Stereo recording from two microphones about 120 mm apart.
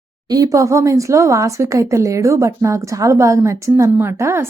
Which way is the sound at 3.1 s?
25° right (ahead or behind).